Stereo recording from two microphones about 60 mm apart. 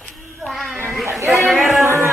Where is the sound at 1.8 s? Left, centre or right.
Right.